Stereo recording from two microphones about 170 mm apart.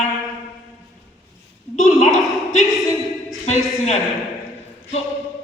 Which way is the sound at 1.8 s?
45° left (ahead or behind).